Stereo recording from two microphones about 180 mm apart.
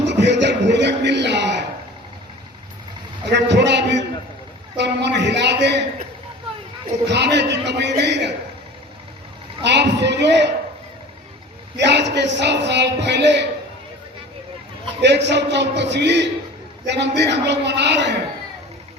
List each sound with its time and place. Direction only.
0.0 s a sound: 75° right (ahead or behind)
3.2 s a man's voice: 75° right (ahead or behind)
7.1 s a man's voice: 70° right (ahead or behind)
9.6 s a man's voice: 70° right (ahead or behind)
11.8 s a man's voice: 75° right (ahead or behind)
15.0 s a man's voice: 75° right (ahead or behind)